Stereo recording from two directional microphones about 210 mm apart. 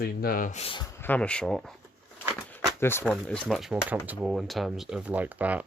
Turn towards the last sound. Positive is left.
turn(degrees=-5)  # may be behind; listen again after turning